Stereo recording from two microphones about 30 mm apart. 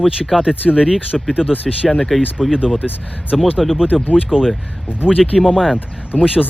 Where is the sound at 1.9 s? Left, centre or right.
Centre.